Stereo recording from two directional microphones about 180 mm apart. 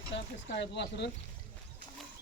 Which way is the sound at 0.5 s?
70° left (ahead or behind).